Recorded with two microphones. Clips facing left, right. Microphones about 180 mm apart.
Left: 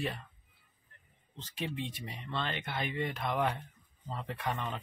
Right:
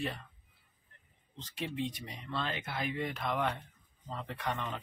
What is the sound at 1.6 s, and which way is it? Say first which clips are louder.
Speech: right 1 dB; centre (ahead or behind).